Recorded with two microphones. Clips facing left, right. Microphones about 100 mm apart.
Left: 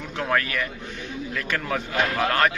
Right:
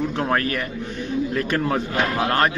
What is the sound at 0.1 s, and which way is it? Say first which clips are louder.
Speech: right 3 dB; 35° right (ahead or behind).